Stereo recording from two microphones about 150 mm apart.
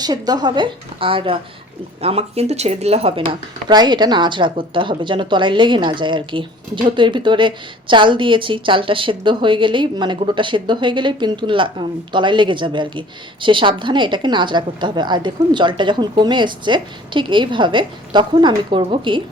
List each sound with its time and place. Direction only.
0.0 s a woman's voice: 25° right (ahead or behind)
3.7 s a woman's voice: 30° right (ahead or behind)